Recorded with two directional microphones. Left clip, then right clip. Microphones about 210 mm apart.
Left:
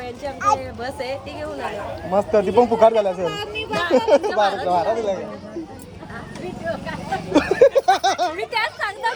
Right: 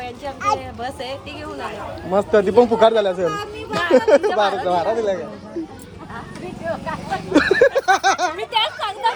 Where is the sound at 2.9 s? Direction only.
45° right (ahead or behind).